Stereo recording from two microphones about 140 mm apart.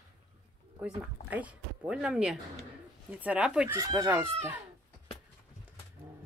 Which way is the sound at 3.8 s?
25° right (ahead or behind).